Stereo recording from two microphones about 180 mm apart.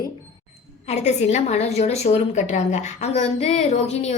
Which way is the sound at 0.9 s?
40° left (ahead or behind).